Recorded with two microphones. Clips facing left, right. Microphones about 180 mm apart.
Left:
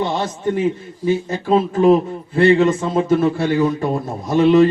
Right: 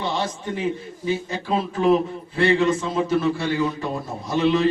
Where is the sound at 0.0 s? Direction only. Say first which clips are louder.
Left 6 dB; 50° left (ahead or behind).